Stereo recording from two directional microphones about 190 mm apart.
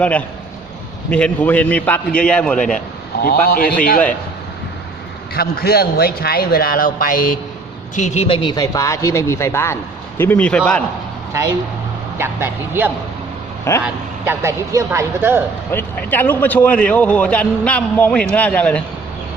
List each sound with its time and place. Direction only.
0.0 s a man's voice: 5° left (ahead or behind)
3.2 s a man's voice: 50° left (ahead or behind)
5.3 s a man's voice: 55° left (ahead or behind); by 10.8 s 5° left (ahead or behind)
12.2 s speech: 10° right (ahead or behind)
15.7 s a man's voice: 10° left (ahead or behind)